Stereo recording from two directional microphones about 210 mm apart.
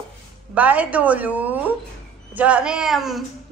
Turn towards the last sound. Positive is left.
turn(degrees=0)  # may be behind; listen again after turning